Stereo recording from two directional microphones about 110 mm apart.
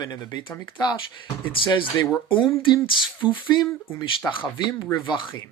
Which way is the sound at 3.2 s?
45° left (ahead or behind).